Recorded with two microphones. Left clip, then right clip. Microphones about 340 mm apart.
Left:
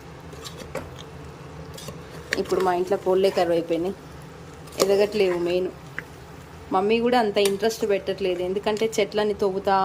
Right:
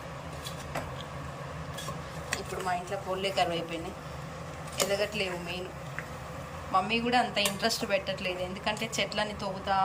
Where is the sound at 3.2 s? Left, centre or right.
Centre.